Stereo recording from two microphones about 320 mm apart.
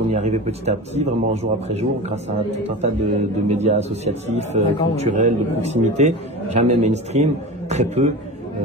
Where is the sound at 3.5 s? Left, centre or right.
Centre.